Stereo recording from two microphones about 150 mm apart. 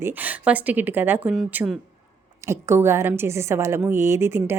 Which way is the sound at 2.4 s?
15° right (ahead or behind).